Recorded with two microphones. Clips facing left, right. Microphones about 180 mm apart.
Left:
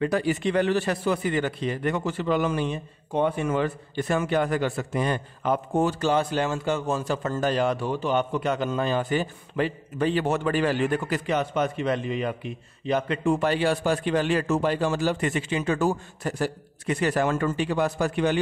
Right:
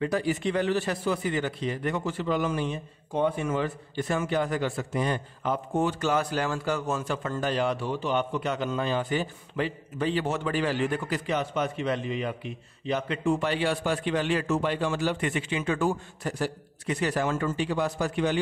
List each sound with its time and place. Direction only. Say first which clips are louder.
0.0 s a man's voice: left 3 dB; 65° left (ahead or behind)
5.9 s a man's voice: left 3 dB; 30° left (ahead or behind); by 18.4 s 60° left (ahead or behind)